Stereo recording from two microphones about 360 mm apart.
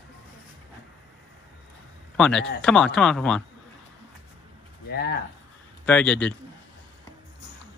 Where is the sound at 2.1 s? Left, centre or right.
Centre.